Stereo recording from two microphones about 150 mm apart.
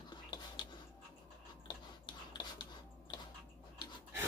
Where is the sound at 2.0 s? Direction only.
30° left (ahead or behind).